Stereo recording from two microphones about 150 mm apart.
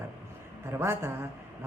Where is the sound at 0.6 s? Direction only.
15° right (ahead or behind).